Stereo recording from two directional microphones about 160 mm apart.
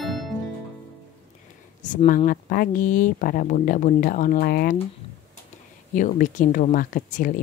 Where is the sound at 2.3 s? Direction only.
60° left (ahead or behind).